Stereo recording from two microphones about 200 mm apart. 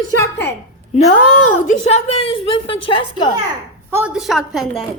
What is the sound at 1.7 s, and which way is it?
A woman's voice, 30° left (ahead or behind).